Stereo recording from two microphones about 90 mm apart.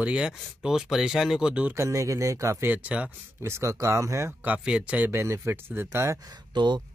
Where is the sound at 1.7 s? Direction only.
35° right (ahead or behind).